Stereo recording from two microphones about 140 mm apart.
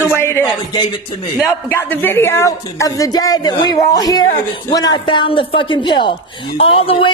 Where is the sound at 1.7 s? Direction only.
15° left (ahead or behind).